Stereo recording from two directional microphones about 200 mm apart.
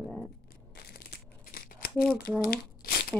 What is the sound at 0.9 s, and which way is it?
Crumpling, 50° left (ahead or behind).